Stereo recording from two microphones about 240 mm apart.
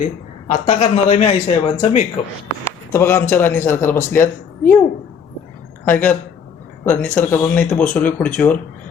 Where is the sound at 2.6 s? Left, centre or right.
Centre.